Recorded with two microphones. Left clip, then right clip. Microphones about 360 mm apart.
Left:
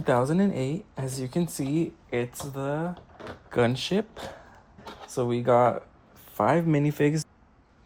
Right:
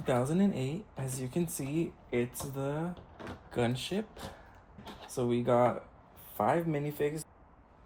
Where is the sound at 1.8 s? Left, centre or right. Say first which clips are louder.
Left 3 dB; left.